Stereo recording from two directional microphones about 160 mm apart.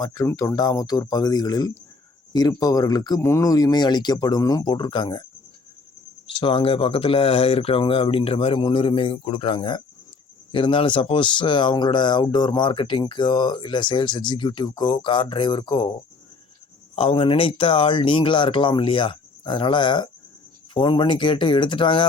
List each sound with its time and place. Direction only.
0.0 s speech: 25° left (ahead or behind)
6.2 s speech: 35° left (ahead or behind)
16.9 s speech: 35° left (ahead or behind)